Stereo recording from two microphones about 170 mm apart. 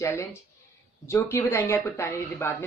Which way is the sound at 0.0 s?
15° left (ahead or behind).